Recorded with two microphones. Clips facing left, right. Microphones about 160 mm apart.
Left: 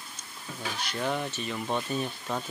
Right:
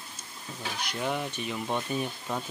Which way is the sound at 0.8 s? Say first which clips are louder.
Left 1 dB; 5° right (ahead or behind).